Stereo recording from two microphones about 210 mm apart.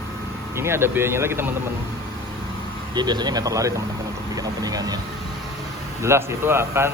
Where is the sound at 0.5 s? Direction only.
10° right (ahead or behind).